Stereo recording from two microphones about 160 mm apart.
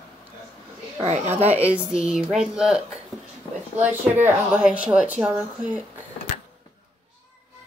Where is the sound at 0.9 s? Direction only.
40° right (ahead or behind).